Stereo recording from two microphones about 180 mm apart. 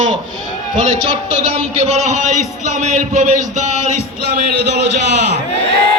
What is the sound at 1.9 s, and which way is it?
Speech, 40° right (ahead or behind).